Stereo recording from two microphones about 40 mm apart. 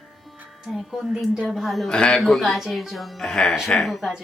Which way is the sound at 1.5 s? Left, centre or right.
Centre.